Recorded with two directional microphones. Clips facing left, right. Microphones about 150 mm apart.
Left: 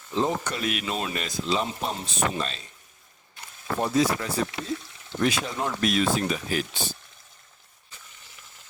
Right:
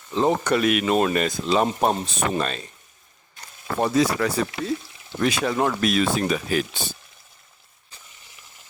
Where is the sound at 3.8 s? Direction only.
80° right.